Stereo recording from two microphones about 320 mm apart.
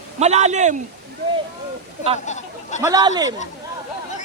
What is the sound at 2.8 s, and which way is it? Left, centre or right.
Speech, centre.